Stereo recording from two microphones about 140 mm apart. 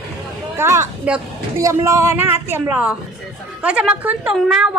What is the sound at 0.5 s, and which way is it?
Speech, 20° right (ahead or behind).